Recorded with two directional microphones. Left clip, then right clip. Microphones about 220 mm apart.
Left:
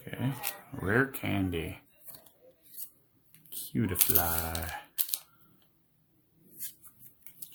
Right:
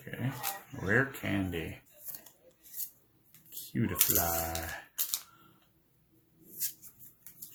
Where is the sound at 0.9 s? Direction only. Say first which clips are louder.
Left 1 dB; 50° left (ahead or behind).